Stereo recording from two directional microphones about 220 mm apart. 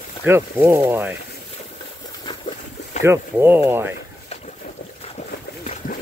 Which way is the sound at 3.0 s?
10° right (ahead or behind).